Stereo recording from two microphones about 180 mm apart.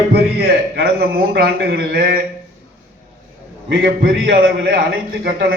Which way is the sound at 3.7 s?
70° right (ahead or behind).